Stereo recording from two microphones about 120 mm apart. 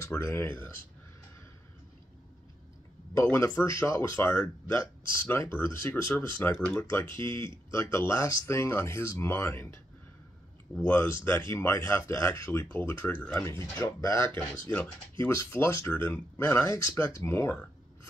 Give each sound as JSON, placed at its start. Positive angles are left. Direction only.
{"t": 0.2, "sound": "speech", "side_deg": 20}
{"t": 3.2, "sound": "speech", "side_deg": 25}
{"t": 11.5, "sound": "speech", "side_deg": 25}